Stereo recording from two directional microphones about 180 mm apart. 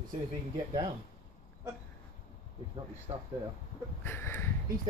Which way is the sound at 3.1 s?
30° right (ahead or behind).